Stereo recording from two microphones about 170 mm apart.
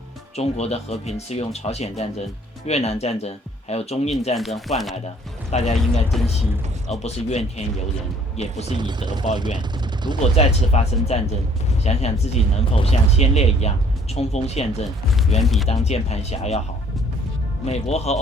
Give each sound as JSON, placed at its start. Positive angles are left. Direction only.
{"t": 0.3, "sound": "speech", "side_deg": 40}
{"t": 4.4, "sound": "speech", "side_deg": 0}
{"t": 5.5, "sound": "speech", "side_deg": 40}
{"t": 7.0, "sound": "speech", "side_deg": 40}
{"t": 8.8, "sound": "speech", "side_deg": -25}
{"t": 10.3, "sound": "speech", "side_deg": 40}
{"t": 15.4, "sound": "speech", "side_deg": 0}
{"t": 15.7, "sound": "speech", "side_deg": 40}
{"t": 17.7, "sound": "speech", "side_deg": 40}